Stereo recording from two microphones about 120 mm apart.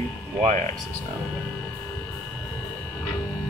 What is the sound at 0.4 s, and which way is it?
Speech, 75° right (ahead or behind).